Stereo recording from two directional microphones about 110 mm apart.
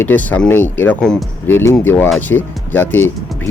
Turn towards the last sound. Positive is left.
turn(degrees=0)  # may be behind; listen again after turning